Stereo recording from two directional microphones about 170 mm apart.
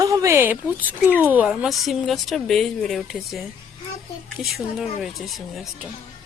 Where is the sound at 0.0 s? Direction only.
20° right (ahead or behind); by 3.4 s centre (ahead or behind).